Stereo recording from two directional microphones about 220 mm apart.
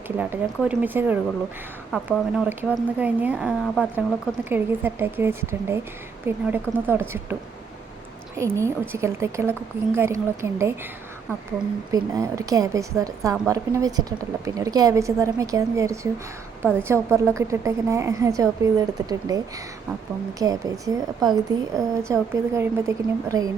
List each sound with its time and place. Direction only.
0.2 s speech: 5° right (ahead or behind)
8.4 s speech: 15° right (ahead or behind)
11.9 s speech: 15° right (ahead or behind)
20.4 s speech: 15° right (ahead or behind)